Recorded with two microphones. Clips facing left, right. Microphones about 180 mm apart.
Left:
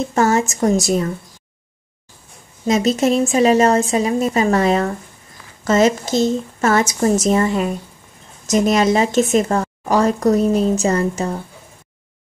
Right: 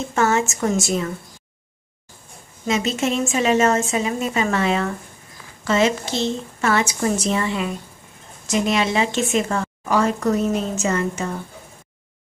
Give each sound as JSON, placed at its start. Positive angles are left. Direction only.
{"t": 0.1, "sound": "speech", "side_deg": 35}
{"t": 2.6, "sound": "a woman's voice", "side_deg": 40}